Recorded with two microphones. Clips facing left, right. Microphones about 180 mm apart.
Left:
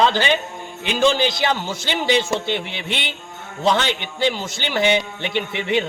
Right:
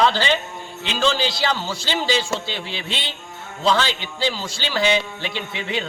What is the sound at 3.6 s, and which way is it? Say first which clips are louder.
A man's voice: left 1 dB; 20° left (ahead or behind).